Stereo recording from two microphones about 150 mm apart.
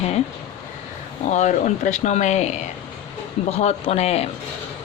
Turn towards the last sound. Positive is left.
turn(degrees=45)  # may be behind; listen again after turning